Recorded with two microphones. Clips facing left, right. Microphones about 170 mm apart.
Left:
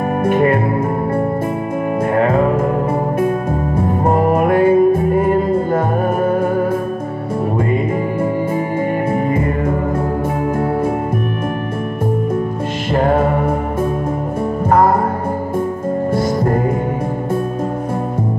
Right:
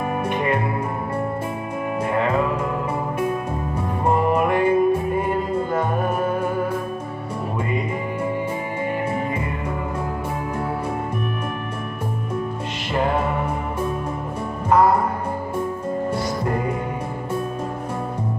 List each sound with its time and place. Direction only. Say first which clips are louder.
0.2 s music: left 10 dB; 50° left (ahead or behind)
2.1 s music: left 7 dB; 45° left (ahead or behind)
12.9 s music: left 7 dB; 50° left (ahead or behind)
14.7 s music: left 3 dB; 50° left (ahead or behind)
16.2 s music: left 7 dB; 45° left (ahead or behind)